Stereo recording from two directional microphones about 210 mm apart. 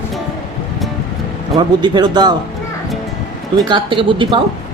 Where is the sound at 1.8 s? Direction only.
20° right (ahead or behind).